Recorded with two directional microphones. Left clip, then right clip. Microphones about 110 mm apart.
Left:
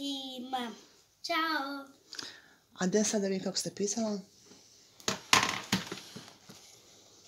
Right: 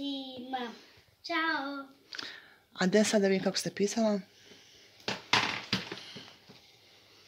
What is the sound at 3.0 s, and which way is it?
Speech, 20° right (ahead or behind).